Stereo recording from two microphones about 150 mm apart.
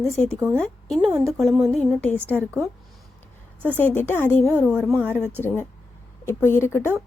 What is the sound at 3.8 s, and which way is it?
Speech, 15° left (ahead or behind).